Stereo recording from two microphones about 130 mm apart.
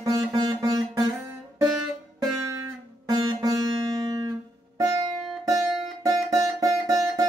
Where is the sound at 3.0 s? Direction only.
30° right (ahead or behind).